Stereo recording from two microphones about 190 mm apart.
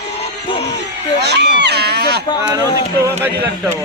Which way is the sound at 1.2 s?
60° right (ahead or behind).